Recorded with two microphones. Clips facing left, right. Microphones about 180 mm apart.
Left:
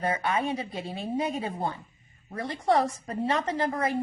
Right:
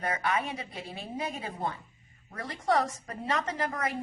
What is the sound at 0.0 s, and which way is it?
A woman's voice, 30° left (ahead or behind).